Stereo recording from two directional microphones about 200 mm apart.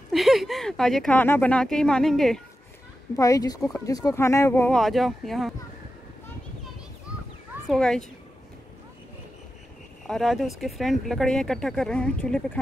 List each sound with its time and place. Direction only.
0.1 s speech: centre (ahead or behind)
3.2 s speech: 15° left (ahead or behind); by 5.5 s centre (ahead or behind)
7.6 s speech: centre (ahead or behind)
10.0 s speech: centre (ahead or behind)